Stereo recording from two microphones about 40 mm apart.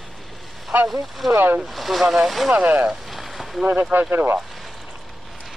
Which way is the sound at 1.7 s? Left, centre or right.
Centre.